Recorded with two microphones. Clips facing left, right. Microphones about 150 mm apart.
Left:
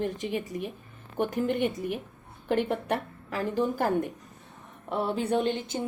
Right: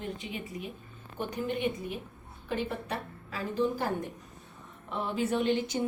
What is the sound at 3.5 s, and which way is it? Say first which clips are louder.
Speech: left 3 dB; 50° left (ahead or behind).